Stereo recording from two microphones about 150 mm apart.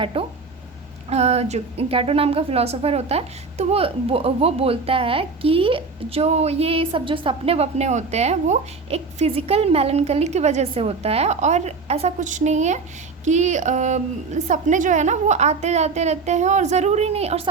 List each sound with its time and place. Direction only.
0.0 s a woman's voice: 35° right (ahead or behind)